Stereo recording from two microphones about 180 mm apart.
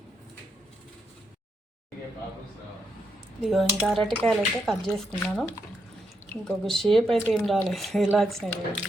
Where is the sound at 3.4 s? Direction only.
Centre (ahead or behind).